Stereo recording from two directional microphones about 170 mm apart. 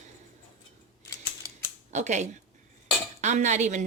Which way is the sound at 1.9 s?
45° right (ahead or behind).